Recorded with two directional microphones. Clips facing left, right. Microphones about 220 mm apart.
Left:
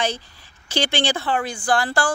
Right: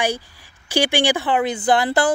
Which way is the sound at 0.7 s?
15° right (ahead or behind).